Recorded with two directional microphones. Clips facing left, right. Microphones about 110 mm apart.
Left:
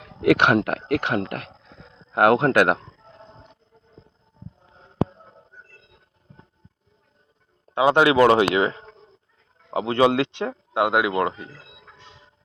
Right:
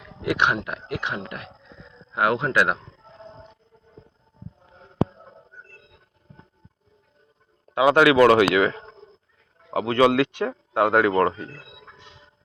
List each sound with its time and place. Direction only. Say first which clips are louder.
0.2 s speech: left 6 dB; 75° left (ahead or behind); by 2.7 s 55° left (ahead or behind)
7.7 s speech: right 1 dB; 25° left (ahead or behind)